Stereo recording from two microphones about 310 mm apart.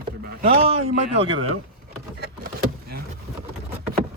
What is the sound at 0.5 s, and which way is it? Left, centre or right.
Speech, centre.